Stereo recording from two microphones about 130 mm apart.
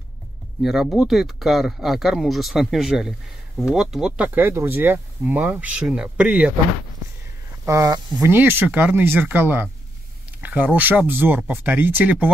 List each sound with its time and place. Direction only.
0.6 s speech: 5° right (ahead or behind)
7.6 s speech: 25° right (ahead or behind)